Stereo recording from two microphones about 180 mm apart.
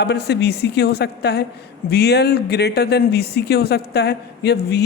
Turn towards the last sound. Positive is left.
turn(degrees=65)  # may be behind; listen again after turning